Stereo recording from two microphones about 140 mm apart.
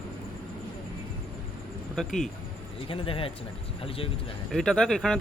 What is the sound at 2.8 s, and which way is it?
Speech, 40° left (ahead or behind).